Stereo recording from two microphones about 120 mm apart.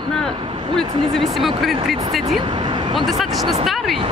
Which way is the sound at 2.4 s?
40° right (ahead or behind).